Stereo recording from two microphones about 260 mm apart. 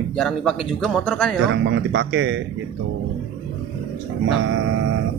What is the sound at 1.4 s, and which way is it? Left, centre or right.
Speech, right.